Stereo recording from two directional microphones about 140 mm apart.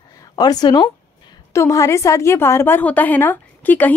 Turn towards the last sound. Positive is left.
turn(degrees=15)  # may be behind; listen again after turning